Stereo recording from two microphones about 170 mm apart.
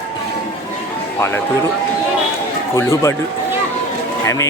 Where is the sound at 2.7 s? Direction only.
15° left (ahead or behind).